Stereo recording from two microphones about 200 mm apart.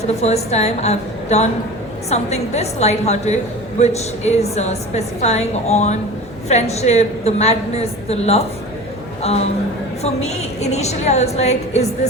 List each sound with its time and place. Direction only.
0.2 s a woman's voice: 35° left (ahead or behind)